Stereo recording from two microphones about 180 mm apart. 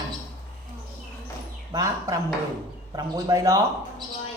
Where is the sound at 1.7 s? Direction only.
20° right (ahead or behind).